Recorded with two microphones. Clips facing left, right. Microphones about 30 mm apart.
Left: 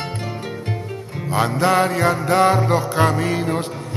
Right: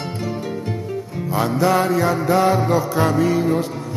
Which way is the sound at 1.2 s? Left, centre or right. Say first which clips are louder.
Even; left.